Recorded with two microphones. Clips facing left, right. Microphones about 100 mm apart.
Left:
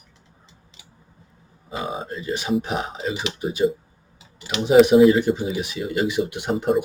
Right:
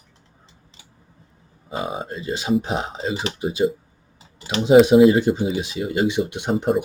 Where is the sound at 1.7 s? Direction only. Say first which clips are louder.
Right 1 dB; 30° right (ahead or behind).